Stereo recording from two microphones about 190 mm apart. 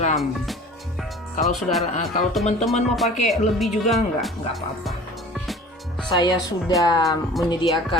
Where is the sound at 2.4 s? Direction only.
35° left (ahead or behind).